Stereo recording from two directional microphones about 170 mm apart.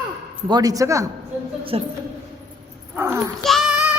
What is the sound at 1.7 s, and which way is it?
Speech, 35° right (ahead or behind).